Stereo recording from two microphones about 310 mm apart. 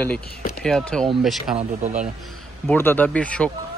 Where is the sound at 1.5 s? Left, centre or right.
Right.